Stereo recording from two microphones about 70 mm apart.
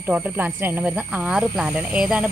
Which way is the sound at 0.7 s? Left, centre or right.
Right.